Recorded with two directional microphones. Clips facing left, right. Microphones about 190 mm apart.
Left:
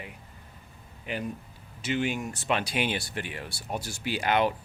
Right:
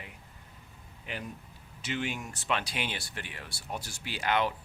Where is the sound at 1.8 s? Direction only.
5° left (ahead or behind).